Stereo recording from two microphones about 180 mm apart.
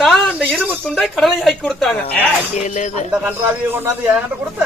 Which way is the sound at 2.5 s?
40° left (ahead or behind).